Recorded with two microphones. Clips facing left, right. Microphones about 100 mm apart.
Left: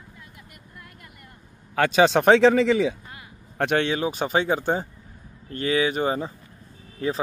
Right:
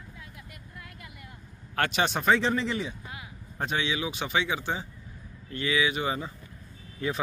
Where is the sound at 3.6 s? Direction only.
60° left (ahead or behind); by 7.2 s 35° left (ahead or behind).